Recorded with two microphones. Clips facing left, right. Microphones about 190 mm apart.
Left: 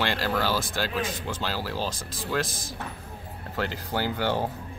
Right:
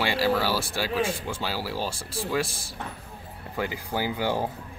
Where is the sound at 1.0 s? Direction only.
30° right (ahead or behind).